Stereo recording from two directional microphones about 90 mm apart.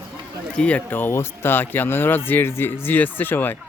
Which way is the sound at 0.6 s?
15° left (ahead or behind).